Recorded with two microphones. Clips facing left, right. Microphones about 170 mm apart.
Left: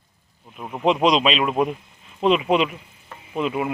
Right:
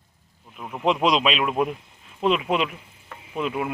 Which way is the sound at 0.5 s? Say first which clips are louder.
Left 3 dB; 15° left (ahead or behind).